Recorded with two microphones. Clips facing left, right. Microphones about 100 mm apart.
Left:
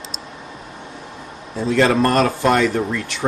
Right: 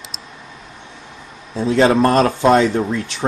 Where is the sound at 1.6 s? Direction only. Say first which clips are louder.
Right 2 dB; 20° right (ahead or behind).